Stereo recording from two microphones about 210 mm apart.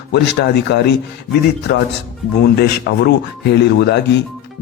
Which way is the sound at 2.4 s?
50° left (ahead or behind).